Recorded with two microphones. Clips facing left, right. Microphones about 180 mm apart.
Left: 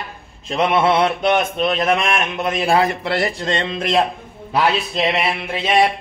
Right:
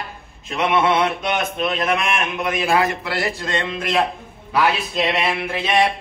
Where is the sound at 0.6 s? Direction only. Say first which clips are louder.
Left 2 dB; 30° left (ahead or behind).